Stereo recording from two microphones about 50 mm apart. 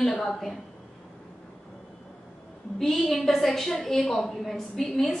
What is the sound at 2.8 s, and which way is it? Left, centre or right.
A woman's voice, centre.